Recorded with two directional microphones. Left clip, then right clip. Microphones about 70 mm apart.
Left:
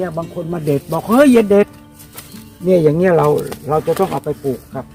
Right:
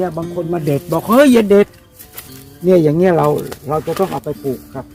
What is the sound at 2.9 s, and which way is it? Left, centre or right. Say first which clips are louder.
Speech: even; right.